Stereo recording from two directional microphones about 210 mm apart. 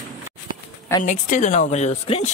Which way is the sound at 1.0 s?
35° left (ahead or behind).